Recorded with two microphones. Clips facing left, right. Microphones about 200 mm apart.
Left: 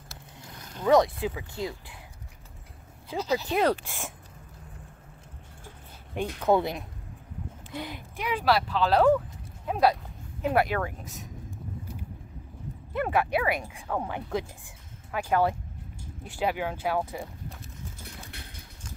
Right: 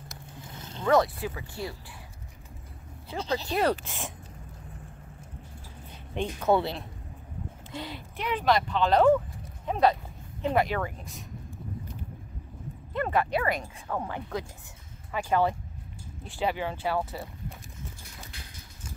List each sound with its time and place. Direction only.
0.1 s a sound: 25° right (ahead or behind)
0.8 s speech: 20° left (ahead or behind)
3.1 s speech: 10° left (ahead or behind)
6.1 s speech: 10° left (ahead or behind)
12.9 s speech: 10° left (ahead or behind)